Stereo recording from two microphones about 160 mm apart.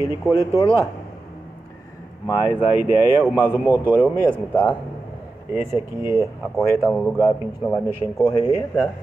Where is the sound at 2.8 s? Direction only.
10° right (ahead or behind).